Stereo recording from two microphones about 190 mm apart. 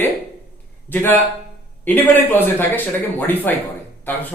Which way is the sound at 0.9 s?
10° left (ahead or behind).